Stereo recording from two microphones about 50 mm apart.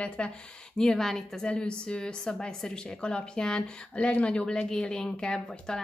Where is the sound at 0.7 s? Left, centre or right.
Centre.